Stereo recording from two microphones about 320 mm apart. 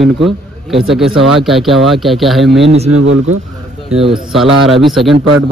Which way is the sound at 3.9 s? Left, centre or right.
Centre.